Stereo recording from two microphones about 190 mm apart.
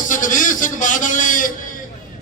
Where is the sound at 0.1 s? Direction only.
45° left (ahead or behind).